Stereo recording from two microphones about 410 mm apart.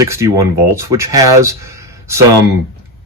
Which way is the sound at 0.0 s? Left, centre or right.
Centre.